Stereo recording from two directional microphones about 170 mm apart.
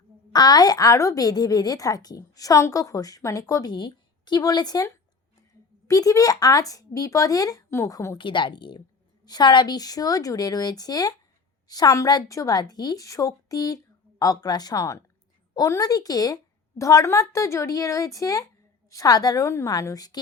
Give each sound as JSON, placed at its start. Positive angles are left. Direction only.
{"t": 0.3, "sound": "a woman's voice", "side_deg": 25}
{"t": 5.9, "sound": "a woman's voice", "side_deg": 20}